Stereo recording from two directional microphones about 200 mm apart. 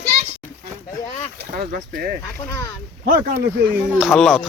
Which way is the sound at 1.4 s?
45° right (ahead or behind).